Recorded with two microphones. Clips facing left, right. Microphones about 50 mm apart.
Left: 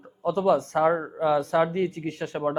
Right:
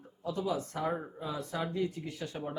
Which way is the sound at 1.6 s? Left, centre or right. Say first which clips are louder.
Left 10 dB; left.